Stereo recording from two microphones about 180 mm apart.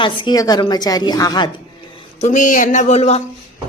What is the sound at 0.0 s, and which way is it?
A woman's voice, 25° left (ahead or behind).